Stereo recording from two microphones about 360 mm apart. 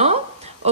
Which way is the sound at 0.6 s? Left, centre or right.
Centre.